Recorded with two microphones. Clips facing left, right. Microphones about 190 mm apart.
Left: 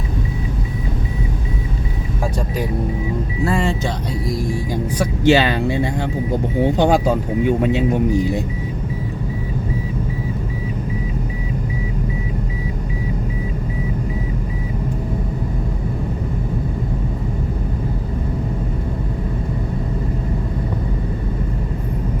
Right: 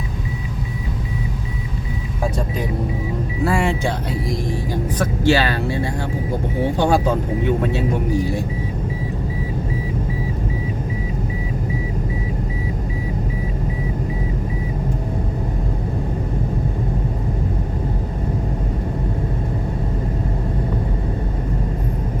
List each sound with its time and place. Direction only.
3.4 s speech: 10° right (ahead or behind)
4.7 s speech: 15° left (ahead or behind)